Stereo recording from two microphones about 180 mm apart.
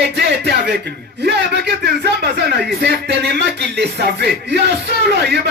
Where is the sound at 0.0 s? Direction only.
70° right (ahead or behind).